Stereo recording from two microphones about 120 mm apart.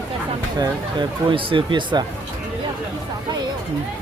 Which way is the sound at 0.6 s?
40° right (ahead or behind).